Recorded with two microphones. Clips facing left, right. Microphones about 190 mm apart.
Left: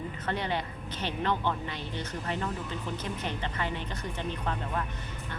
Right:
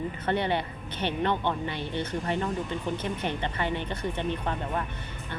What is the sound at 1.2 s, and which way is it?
Speech, 20° right (ahead or behind).